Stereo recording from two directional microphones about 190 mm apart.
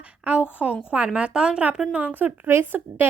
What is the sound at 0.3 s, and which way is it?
A woman's voice, 5° right (ahead or behind).